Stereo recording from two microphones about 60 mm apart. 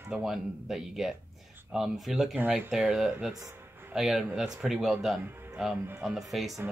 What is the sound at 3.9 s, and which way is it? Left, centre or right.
Speech, centre.